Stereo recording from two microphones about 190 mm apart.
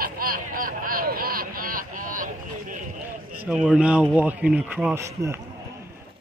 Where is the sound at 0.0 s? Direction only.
50° right (ahead or behind).